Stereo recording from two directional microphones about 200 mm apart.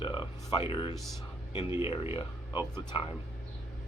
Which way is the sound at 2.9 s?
25° left (ahead or behind).